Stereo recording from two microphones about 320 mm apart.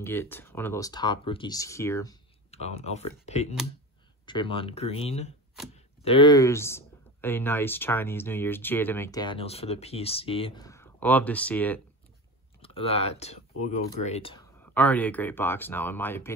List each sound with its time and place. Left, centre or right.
0.0 s speech: centre
12.6 s speech: centre
14.6 s speech: centre